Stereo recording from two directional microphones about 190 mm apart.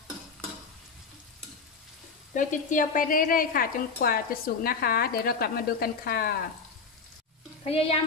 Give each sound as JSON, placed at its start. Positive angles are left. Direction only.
{"t": 2.3, "sound": "speech", "side_deg": 45}
{"t": 7.6, "sound": "speech", "side_deg": 30}